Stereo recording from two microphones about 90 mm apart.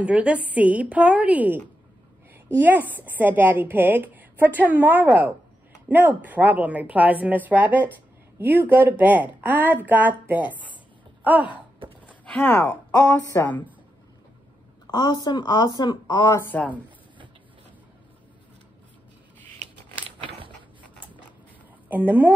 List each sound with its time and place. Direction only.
0.0 s a woman's voice: 15° right (ahead or behind)
12.1 s a sound: 15° left (ahead or behind)
12.9 s speech: 30° left (ahead or behind)
14.9 s speech: 55° left (ahead or behind)
16.4 s speech: 15° left (ahead or behind)
21.8 s speech: 20° right (ahead or behind)